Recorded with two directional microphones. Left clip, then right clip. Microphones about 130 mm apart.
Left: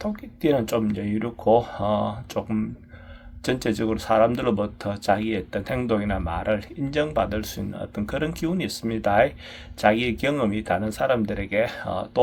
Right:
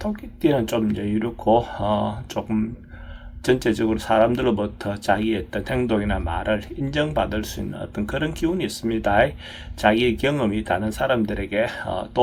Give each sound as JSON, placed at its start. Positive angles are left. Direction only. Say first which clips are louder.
{"t": 0.0, "sound": "speech", "louder": "right 2 dB", "side_deg": 35}